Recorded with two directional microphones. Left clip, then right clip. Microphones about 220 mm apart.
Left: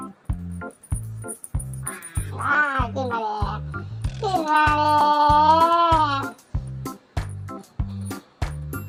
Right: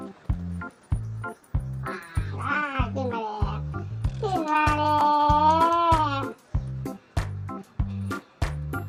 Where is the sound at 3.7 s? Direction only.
Centre (ahead or behind).